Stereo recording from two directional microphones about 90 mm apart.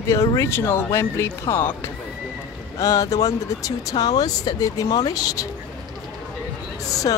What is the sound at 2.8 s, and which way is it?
Speech, 40° left (ahead or behind).